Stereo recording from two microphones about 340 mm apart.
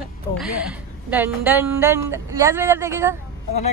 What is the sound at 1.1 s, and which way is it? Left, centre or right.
A woman's voice, centre.